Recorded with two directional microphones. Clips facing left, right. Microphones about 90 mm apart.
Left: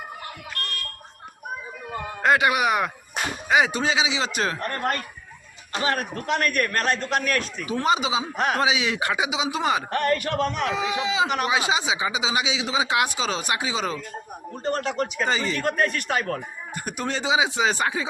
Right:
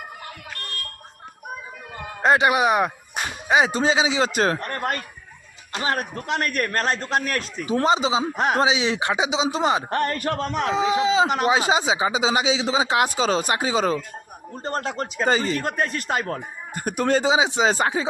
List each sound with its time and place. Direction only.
2.2 s a man's voice: 25° right (ahead or behind); by 4.5 s 40° right (ahead or behind)
5.8 s a man's voice: 30° right (ahead or behind)
15.6 s a man's voice: 25° right (ahead or behind)
16.7 s speech: 45° right (ahead or behind)
17.3 s a man's voice: 30° right (ahead or behind)